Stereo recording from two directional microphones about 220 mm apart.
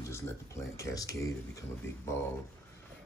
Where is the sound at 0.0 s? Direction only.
10° left (ahead or behind).